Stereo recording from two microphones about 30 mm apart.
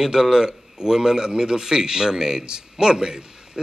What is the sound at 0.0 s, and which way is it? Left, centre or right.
A man's voice, centre.